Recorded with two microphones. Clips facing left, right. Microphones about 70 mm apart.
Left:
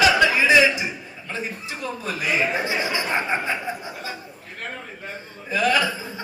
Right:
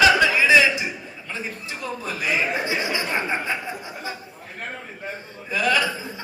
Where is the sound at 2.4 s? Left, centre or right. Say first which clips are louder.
Left 1 dB; left.